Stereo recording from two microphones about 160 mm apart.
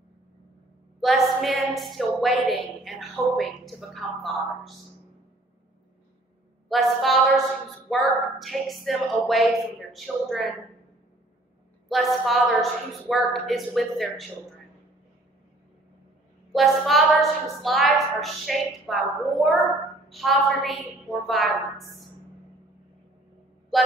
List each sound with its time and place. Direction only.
1.0 s a woman's voice: centre (ahead or behind)
6.7 s a woman's voice: centre (ahead or behind)
11.9 s a woman's voice: centre (ahead or behind)
16.5 s a woman's voice: centre (ahead or behind)